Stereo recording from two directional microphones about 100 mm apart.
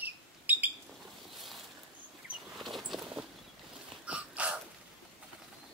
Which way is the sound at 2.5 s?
Centre (ahead or behind).